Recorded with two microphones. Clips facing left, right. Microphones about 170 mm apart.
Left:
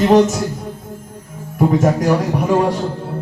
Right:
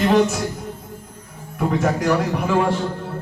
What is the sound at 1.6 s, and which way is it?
A man's voice, 40° left (ahead or behind).